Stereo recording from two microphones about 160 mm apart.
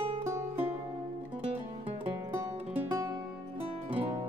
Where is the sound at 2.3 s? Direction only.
15° right (ahead or behind).